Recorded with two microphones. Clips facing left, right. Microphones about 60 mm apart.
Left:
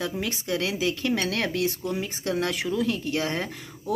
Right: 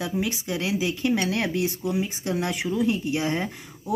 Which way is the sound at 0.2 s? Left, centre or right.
Centre.